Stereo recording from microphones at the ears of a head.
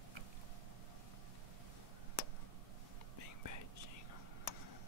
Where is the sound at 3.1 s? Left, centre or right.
Left.